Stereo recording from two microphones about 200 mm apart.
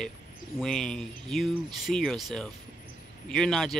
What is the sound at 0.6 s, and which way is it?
Speech, 5° left (ahead or behind).